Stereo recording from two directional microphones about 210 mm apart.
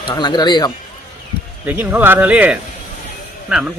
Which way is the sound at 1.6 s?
10° right (ahead or behind).